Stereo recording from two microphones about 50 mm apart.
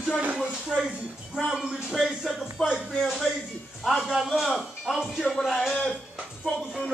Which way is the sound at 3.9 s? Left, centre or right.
Centre.